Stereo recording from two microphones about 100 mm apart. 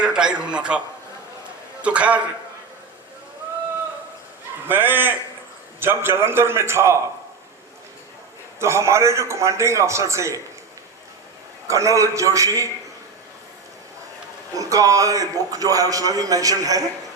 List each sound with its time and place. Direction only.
0.0 s a man's voice: 10° right (ahead or behind)
1.8 s a man's voice: 10° right (ahead or behind)
4.7 s a man's voice: 20° right (ahead or behind)
8.5 s a man's voice: 30° right (ahead or behind)
11.7 s a man's voice: 30° right (ahead or behind)
14.6 s a man's voice: 35° right (ahead or behind)